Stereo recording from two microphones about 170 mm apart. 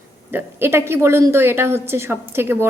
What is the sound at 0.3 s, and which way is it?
A woman's voice, 15° right (ahead or behind).